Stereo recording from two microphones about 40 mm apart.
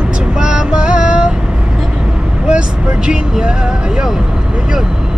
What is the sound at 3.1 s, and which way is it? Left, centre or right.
Music, right.